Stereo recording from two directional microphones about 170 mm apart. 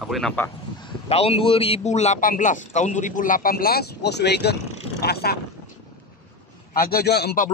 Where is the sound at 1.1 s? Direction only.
35° left (ahead or behind); by 4.5 s 80° left.